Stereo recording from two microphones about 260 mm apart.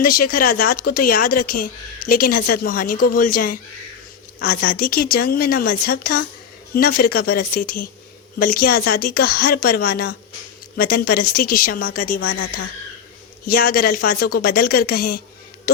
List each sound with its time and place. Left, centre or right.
0.0 s speech: left